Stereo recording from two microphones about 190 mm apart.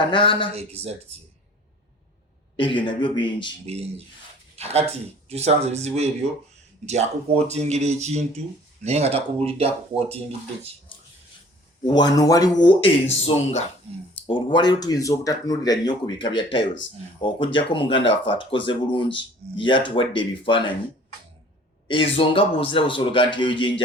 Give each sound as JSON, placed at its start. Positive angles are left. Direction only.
{"t": 0.0, "sound": "speech", "side_deg": 25}
{"t": 0.5, "sound": "speech", "side_deg": -35}
{"t": 2.6, "sound": "speech", "side_deg": 25}
{"t": 3.7, "sound": "speech", "side_deg": -30}
{"t": 11.9, "sound": "speech", "side_deg": 20}
{"t": 21.8, "sound": "speech", "side_deg": 30}